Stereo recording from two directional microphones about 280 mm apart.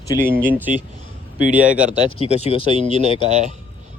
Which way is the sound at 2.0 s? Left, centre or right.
Left.